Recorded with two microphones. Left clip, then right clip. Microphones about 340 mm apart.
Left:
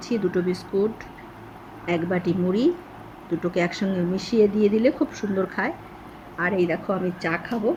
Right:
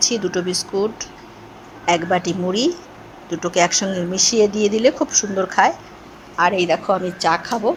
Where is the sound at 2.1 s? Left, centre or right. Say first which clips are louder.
Right 5 dB; right.